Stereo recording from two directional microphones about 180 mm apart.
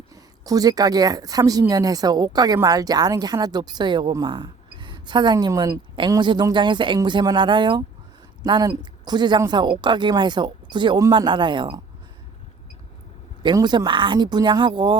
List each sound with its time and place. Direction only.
0.1 s a woman's voice: 20° right (ahead or behind)
13.4 s a woman's voice: 25° right (ahead or behind)